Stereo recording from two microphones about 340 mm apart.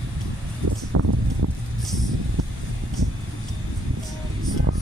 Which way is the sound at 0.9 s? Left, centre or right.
Right.